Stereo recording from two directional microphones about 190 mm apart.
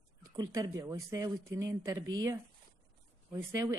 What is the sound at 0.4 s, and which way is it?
Speech, 20° right (ahead or behind).